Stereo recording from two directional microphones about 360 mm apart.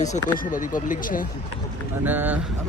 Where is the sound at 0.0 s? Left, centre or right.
Left.